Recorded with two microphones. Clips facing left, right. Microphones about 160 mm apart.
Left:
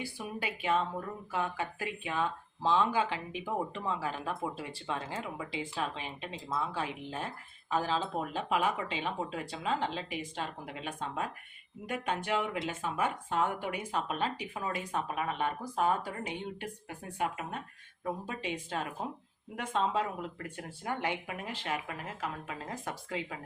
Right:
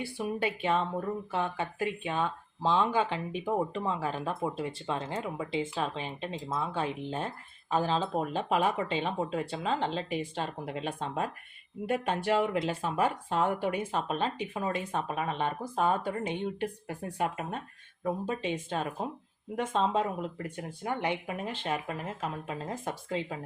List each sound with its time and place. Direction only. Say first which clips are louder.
0.0 s speech: right 6 dB; 30° right (ahead or behind)
16.6 s speech: right 7 dB; 40° right (ahead or behind)
18.0 s speech: right 5 dB; 25° right (ahead or behind)